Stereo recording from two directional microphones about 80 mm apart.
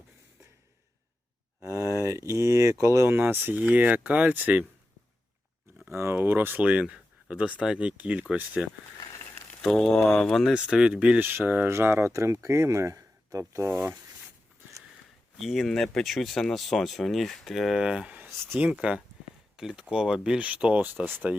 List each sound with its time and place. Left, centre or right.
1.6 s speech: right
3.1 s speech: right
5.9 s speech: right
9.6 s speech: centre
10.5 s speech: centre; by 13.7 s right
15.4 s speech: centre; by 21.2 s right